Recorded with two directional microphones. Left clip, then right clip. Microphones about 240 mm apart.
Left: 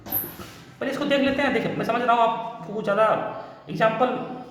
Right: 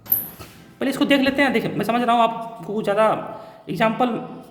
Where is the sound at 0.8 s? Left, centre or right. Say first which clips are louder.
Right 4 dB; right.